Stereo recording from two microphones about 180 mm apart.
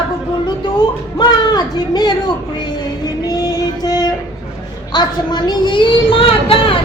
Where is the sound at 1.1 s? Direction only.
25° left (ahead or behind).